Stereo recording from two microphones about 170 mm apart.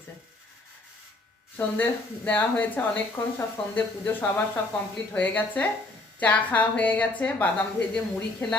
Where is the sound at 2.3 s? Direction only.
10° left (ahead or behind).